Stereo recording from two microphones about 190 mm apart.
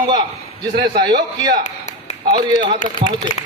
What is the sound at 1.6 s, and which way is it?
Tap, 40° left (ahead or behind).